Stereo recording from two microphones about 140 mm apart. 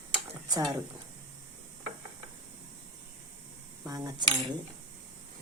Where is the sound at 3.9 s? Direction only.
25° right (ahead or behind).